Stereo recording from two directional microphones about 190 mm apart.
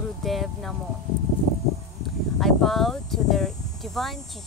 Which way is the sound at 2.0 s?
Centre (ahead or behind).